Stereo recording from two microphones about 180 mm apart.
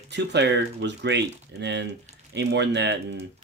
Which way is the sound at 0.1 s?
75° right (ahead or behind).